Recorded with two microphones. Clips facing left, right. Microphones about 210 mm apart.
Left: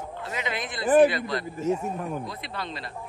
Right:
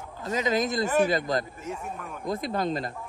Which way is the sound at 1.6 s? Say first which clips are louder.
Left 9 dB; 25° left (ahead or behind).